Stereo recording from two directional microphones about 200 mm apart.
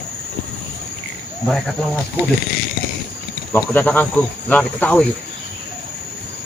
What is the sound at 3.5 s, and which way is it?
Speech, 5° left (ahead or behind).